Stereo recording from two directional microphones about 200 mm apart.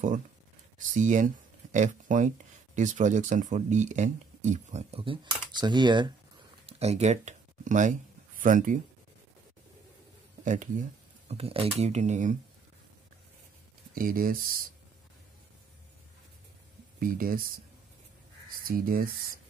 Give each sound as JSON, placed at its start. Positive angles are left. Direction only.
{"t": 0.7, "sound": "speech", "side_deg": -40}
{"t": 6.6, "sound": "a sound", "side_deg": -30}
{"t": 10.4, "sound": "speech", "side_deg": -40}
{"t": 13.9, "sound": "speech", "side_deg": -45}
{"t": 17.0, "sound": "speech", "side_deg": -45}
{"t": 18.7, "sound": "speech", "side_deg": -45}